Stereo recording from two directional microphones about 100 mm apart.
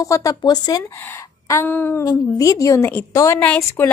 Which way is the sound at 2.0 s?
35° left (ahead or behind).